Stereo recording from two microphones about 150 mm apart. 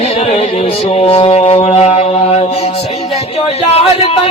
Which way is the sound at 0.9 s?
40° left (ahead or behind).